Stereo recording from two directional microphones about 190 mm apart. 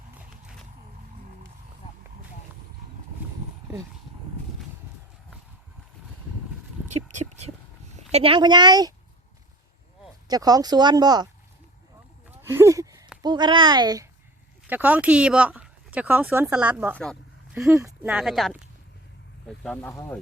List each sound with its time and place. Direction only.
6.8 s a sound: 40° right (ahead or behind)
7.9 s a woman's voice: 30° right (ahead or behind)
10.2 s speech: 20° right (ahead or behind)
12.3 s a sound: 10° right (ahead or behind)
13.2 s speech: 25° right (ahead or behind)
14.7 s speech: 10° right (ahead or behind)